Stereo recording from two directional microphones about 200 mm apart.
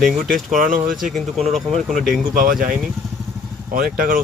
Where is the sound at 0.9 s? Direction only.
Centre (ahead or behind).